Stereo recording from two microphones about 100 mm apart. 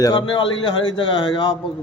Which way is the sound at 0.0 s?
45° left (ahead or behind).